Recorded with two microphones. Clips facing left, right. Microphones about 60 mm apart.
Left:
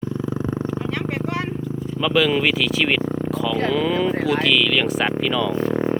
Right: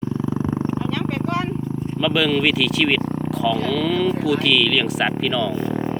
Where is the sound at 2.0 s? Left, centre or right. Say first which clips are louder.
Left 1 dB; centre.